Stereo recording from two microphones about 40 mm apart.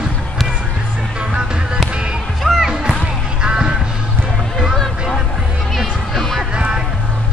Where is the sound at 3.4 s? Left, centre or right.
Right.